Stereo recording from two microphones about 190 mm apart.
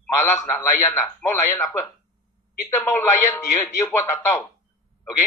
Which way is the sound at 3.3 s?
15° left (ahead or behind).